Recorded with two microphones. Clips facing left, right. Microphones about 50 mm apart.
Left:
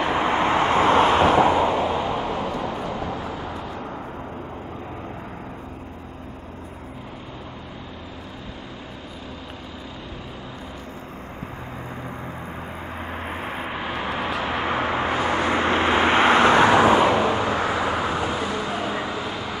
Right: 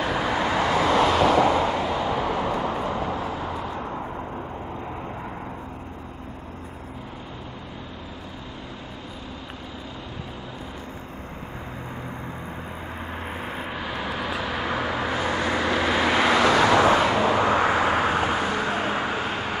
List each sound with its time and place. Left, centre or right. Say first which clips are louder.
0.0 s vehicle: left 3 dB; left
2.5 s vehicle: right 2 dB; right
13.3 s vehicle: left 3 dB; left
17.4 s vehicle: right 2 dB; right